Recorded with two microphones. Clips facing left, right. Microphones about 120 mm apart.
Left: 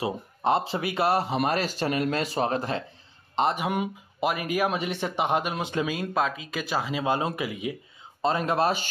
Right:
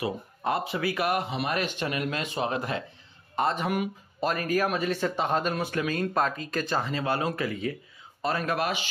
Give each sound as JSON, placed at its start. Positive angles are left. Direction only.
{"t": 0.0, "sound": "speech", "side_deg": 25}
{"t": 3.3, "sound": "speech", "side_deg": 15}
{"t": 5.9, "sound": "speech", "side_deg": 5}
{"t": 8.2, "sound": "speech", "side_deg": 25}